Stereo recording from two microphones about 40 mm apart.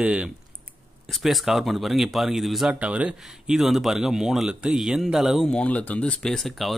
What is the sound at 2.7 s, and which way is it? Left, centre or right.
Speech, right.